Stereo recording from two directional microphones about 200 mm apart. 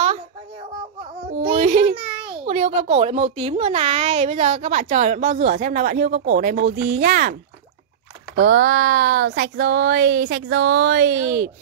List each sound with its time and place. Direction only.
0.0 s a sound: 30° right (ahead or behind)
1.4 s a child's voice: 30° right (ahead or behind); by 7.3 s 45° right (ahead or behind)
8.4 s speech: 65° right (ahead or behind)